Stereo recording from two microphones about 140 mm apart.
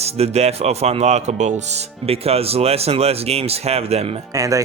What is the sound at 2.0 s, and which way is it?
Speech, 45° right (ahead or behind).